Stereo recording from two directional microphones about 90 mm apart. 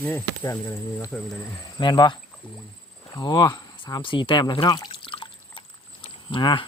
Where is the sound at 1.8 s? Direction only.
55° left (ahead or behind).